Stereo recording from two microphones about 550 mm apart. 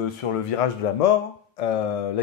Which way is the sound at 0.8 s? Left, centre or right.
Left.